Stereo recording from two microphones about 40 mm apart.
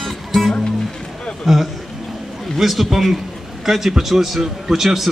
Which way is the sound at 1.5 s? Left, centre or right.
Centre.